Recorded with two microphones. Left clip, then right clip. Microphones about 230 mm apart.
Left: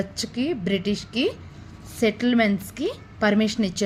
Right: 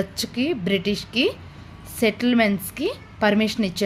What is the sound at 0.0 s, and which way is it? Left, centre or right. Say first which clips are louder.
A woman's voice: right 2 dB; centre.